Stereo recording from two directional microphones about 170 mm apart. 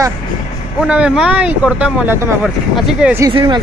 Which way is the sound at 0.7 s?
5° right (ahead or behind).